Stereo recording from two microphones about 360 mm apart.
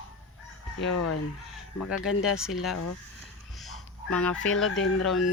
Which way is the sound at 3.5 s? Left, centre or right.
Centre.